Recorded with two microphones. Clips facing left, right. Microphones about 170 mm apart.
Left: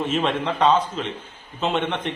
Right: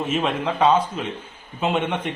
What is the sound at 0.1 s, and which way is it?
A man's voice, 5° right (ahead or behind).